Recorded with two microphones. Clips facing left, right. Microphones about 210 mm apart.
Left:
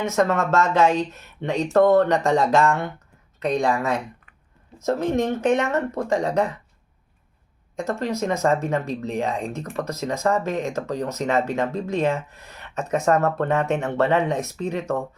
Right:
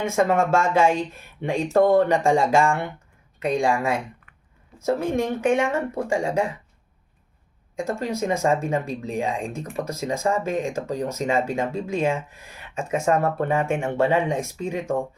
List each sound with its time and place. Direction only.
0.1 s speech: 10° right (ahead or behind)
7.8 s speech: 10° right (ahead or behind)